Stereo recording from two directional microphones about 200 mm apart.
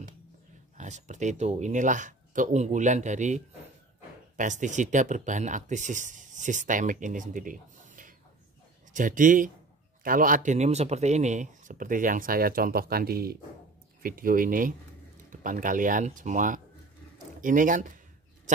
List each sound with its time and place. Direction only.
0.7 s speech: 35° right (ahead or behind)